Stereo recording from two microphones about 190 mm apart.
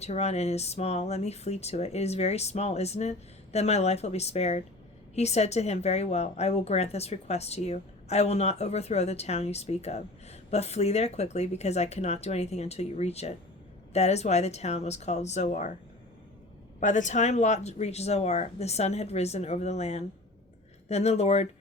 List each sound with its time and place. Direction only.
0.0 s a woman's voice: 35° left (ahead or behind)
16.8 s a woman's voice: 40° left (ahead or behind)